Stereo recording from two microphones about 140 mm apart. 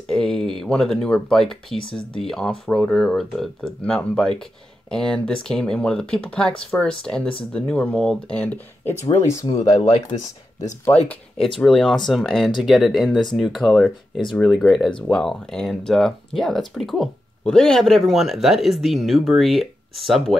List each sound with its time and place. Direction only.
0.1 s speech: 5° left (ahead or behind)
1.8 s speech: 35° left (ahead or behind)
2.1 s speech: 5° left (ahead or behind)
9.5 s speech: 35° left (ahead or behind)
11.4 s speech: centre (ahead or behind)